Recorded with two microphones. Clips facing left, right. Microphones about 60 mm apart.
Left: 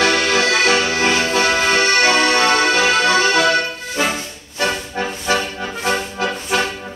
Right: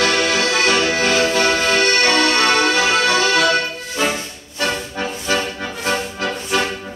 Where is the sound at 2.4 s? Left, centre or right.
Centre.